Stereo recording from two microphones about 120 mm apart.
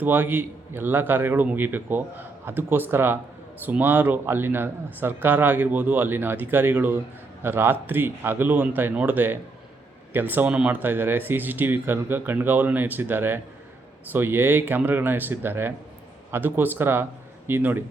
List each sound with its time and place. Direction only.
0.0 s a man's voice: 15° right (ahead or behind)